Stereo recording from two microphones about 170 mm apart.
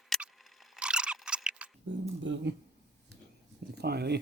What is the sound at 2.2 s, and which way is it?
Speech, 90° right.